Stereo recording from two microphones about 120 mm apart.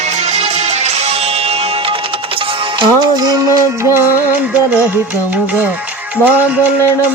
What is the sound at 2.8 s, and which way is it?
Music, 35° right (ahead or behind).